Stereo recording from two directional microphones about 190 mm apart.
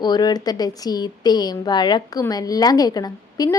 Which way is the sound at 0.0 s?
20° left (ahead or behind).